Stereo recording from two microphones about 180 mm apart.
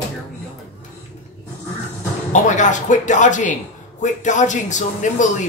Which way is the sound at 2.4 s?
45° left (ahead or behind).